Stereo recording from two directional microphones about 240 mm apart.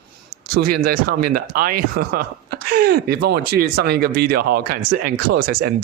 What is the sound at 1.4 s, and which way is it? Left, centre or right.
Speech, right.